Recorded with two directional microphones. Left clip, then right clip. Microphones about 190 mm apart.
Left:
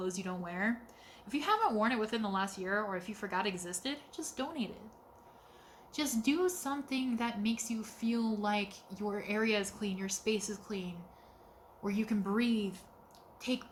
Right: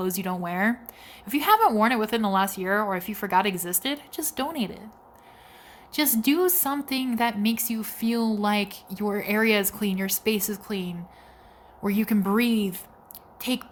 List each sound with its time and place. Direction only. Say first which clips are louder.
0.0 s a woman's voice: right 10 dB; 55° right (ahead or behind)
5.9 s a woman's voice: right 10 dB; 50° right (ahead or behind)